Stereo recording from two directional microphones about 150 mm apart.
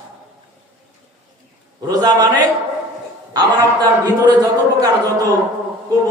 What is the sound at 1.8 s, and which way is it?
Speech, 25° right (ahead or behind).